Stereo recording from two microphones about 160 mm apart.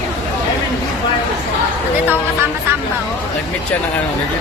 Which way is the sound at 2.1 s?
15° right (ahead or behind).